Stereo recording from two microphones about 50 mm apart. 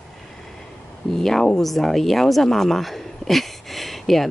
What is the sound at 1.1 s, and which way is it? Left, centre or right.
A woman's voice, centre.